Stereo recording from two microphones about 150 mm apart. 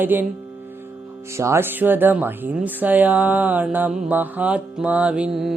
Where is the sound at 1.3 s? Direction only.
20° right (ahead or behind).